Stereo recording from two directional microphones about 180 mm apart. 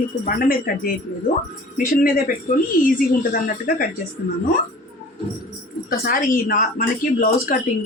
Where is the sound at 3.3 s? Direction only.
50° left (ahead or behind).